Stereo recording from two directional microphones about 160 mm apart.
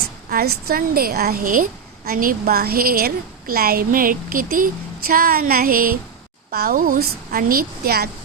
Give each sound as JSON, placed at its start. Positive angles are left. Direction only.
{"t": 0.3, "sound": "a woman's voice", "side_deg": -75}